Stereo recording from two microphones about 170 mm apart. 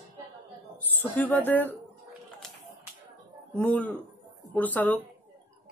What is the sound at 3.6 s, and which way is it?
Speech, 15° left (ahead or behind).